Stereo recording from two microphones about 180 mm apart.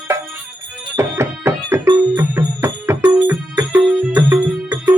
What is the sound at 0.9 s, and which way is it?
Music, 15° right (ahead or behind).